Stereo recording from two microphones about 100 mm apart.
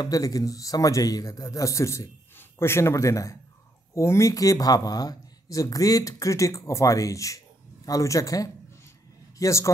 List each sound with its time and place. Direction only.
0.0 s a man's voice: 35° left (ahead or behind)